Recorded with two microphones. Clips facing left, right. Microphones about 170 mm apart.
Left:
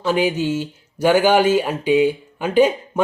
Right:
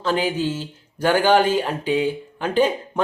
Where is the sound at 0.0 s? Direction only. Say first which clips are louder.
Left 3 dB; 10° left (ahead or behind).